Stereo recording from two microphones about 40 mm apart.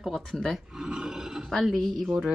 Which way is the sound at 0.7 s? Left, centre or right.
Centre.